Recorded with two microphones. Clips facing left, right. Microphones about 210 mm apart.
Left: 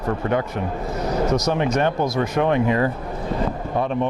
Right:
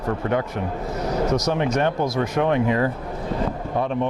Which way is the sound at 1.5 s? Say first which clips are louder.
Left 1 dB; 20° left (ahead or behind).